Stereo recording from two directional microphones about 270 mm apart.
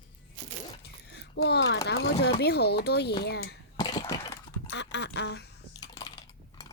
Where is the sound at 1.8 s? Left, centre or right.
Left.